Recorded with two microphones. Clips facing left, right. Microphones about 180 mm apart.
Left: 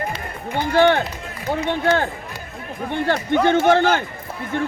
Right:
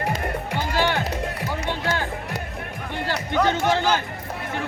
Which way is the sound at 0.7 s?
55° left (ahead or behind).